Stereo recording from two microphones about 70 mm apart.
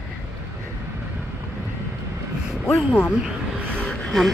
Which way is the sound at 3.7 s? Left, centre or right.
Centre.